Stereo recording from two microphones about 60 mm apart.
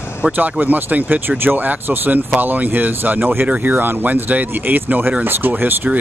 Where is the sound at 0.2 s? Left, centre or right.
Right.